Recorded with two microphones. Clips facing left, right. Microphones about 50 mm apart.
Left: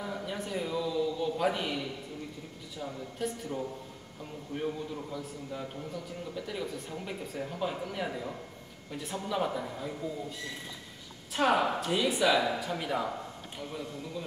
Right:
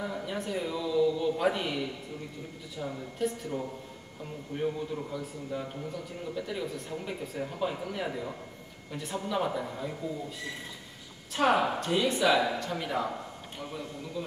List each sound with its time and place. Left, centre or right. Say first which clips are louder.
0.0 s a man's voice: right 2 dB; centre
11.3 s speech: right 1 dB; centre